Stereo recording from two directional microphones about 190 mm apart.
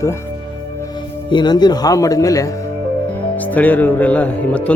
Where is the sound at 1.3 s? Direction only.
25° left (ahead or behind).